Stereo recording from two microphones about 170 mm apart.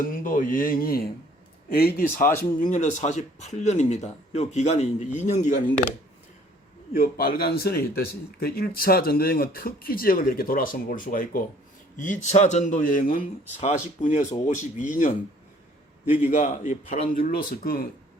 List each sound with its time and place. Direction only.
0.0 s speech: 55° left (ahead or behind)
6.9 s speech: 60° left (ahead or behind)
16.3 s speech: 45° left (ahead or behind)
17.2 s speech: 55° left (ahead or behind)